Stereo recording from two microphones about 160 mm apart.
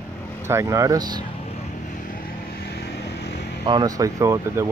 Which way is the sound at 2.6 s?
90° left.